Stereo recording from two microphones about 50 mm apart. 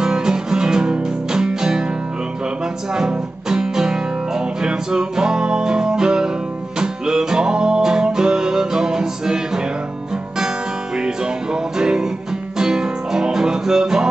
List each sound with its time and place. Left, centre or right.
0.0 s music: centre
2.9 s music: centre
11.5 s music: centre